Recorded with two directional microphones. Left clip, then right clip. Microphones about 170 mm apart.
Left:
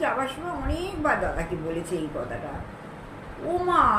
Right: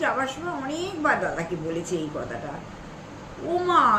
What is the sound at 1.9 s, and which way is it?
Speech, 20° right (ahead or behind).